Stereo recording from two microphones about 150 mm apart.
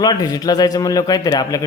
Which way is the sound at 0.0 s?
25° left (ahead or behind).